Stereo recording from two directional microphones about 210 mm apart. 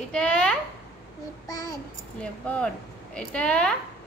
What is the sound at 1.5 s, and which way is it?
Speech, 15° left (ahead or behind).